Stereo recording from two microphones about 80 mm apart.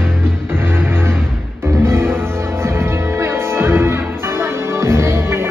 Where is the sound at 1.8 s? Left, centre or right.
Right.